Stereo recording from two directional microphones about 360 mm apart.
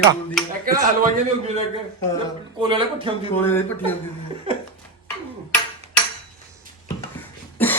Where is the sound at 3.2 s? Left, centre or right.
Centre.